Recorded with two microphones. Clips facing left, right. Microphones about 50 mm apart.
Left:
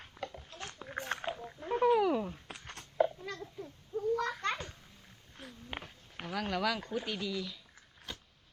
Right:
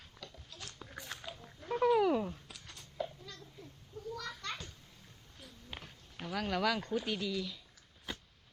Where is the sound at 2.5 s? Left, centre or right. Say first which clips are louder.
Left 6 dB; left.